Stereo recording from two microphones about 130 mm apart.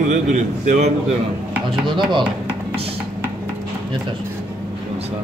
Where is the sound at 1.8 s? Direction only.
35° right (ahead or behind).